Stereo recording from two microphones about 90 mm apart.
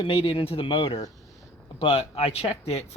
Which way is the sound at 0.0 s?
75° left (ahead or behind).